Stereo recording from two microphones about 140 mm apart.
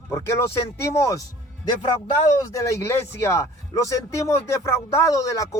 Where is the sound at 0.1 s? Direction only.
20° left (ahead or behind).